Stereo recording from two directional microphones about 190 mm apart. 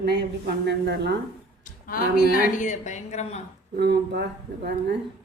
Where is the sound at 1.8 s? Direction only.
50° left (ahead or behind); by 3.4 s 35° left (ahead or behind).